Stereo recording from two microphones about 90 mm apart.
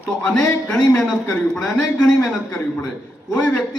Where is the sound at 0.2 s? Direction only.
10° left (ahead or behind).